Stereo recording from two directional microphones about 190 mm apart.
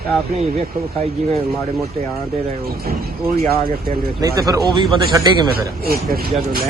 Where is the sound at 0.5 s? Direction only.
50° right (ahead or behind).